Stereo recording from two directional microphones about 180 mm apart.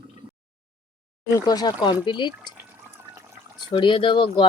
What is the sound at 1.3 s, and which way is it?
Speech, 20° left (ahead or behind).